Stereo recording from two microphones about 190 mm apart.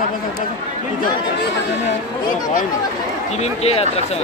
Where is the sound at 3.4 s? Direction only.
35° left (ahead or behind).